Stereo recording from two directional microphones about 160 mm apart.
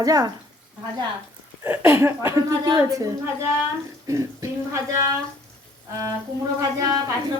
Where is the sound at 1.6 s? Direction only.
15° right (ahead or behind).